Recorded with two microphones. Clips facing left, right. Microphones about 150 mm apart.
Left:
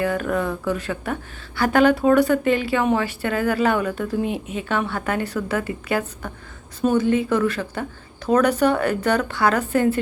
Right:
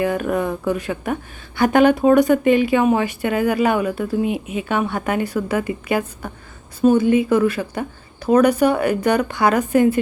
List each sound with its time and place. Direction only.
0.0 s a woman's voice: 15° right (ahead or behind)